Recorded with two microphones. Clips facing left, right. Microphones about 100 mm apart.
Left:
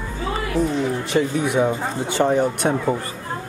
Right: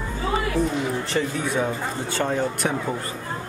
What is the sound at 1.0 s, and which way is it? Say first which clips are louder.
Speech: left 5 dB; 15° left (ahead or behind).